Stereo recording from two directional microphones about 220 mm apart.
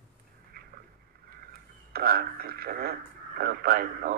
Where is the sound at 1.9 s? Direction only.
40° right (ahead or behind).